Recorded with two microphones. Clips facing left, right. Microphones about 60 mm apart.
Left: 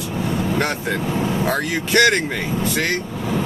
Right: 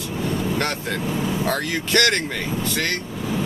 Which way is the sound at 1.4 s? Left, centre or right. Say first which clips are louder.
Left 2 dB; centre.